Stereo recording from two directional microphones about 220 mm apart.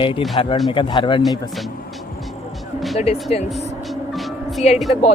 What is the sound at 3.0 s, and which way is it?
Speech, 30° left (ahead or behind).